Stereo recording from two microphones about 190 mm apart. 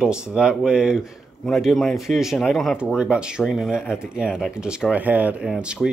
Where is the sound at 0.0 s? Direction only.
5° right (ahead or behind).